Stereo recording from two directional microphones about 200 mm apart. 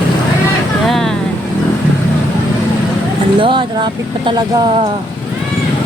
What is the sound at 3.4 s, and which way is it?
Speech, 25° right (ahead or behind).